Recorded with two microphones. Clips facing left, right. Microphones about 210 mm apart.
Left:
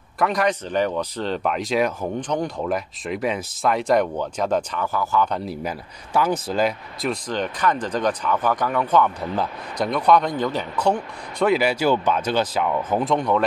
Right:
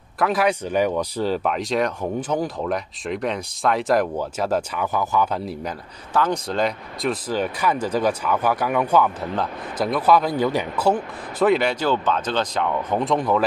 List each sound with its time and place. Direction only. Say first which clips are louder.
0.2 s speech: right 1 dB; 5° right (ahead or behind)
4.8 s speech: even; 20° right (ahead or behind)
5.3 s speech: even; centre (ahead or behind)